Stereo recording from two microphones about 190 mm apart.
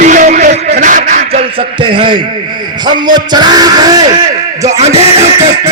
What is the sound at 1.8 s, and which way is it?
Yell, 25° right (ahead or behind).